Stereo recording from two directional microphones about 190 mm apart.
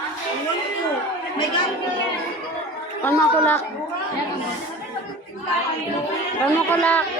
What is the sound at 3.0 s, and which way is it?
Speech, 10° left (ahead or behind).